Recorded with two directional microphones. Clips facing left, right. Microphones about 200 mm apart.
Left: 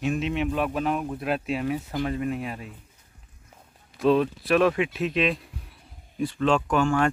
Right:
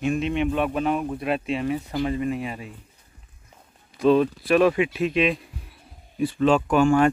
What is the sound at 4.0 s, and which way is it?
Speech, centre (ahead or behind).